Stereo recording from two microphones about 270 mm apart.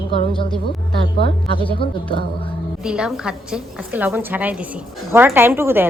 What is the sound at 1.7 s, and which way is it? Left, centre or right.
Speech, centre.